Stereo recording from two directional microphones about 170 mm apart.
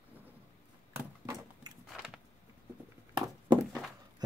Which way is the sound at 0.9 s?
15° right (ahead or behind).